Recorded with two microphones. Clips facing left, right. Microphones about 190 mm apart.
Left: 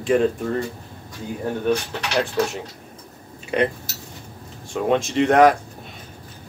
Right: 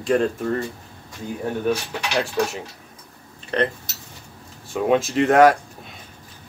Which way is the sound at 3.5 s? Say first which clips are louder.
Left 1 dB; 10° left (ahead or behind).